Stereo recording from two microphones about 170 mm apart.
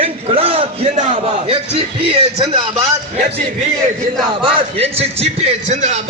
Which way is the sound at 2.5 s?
25° right (ahead or behind).